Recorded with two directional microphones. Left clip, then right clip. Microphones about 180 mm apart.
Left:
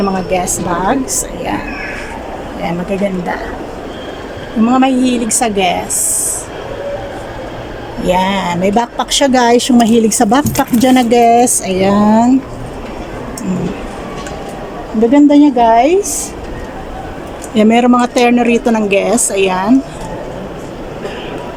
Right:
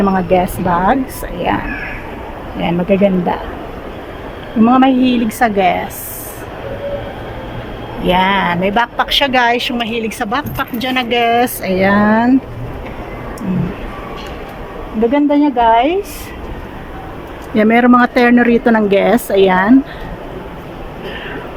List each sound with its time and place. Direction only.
0.0 s a woman's voice: centre (ahead or behind)
2.9 s a woman's voice: 5° right (ahead or behind)
4.6 s a woman's voice: centre (ahead or behind)
8.0 s speech: 20° left (ahead or behind)
15.1 s speech: 20° left (ahead or behind)
17.5 s a woman's voice: 15° left (ahead or behind)